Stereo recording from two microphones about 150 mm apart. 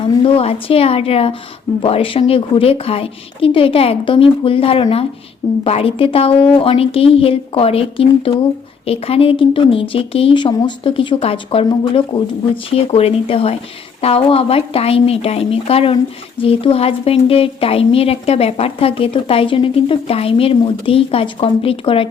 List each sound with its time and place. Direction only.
0.2 s a woman's voice: 40° left (ahead or behind)